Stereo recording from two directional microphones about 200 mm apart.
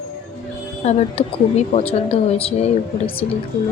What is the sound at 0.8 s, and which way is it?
A woman's voice, 35° left (ahead or behind).